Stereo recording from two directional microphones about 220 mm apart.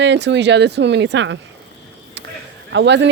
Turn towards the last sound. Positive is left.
turn(degrees=-55)  # may be behind; listen again after turning